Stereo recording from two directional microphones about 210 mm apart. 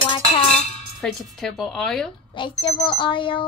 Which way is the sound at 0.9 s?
Centre (ahead or behind).